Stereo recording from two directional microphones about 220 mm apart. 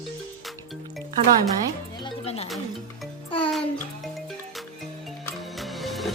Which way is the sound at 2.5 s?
Centre (ahead or behind).